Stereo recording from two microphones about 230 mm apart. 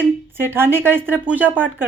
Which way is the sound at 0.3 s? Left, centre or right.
Centre.